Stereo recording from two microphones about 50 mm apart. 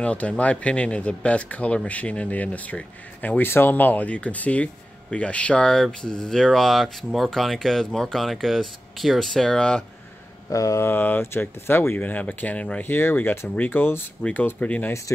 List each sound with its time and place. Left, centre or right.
0.0 s speech: left
3.4 s speech: left
5.7 s speech: centre
10.5 s a sound: left
10.9 s speech: left
12.1 s speech: left
12.8 s speech: left
14.6 s speech: left
15.1 s speech: left